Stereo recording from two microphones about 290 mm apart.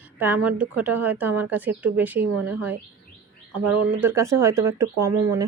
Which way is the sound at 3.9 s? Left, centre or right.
Centre.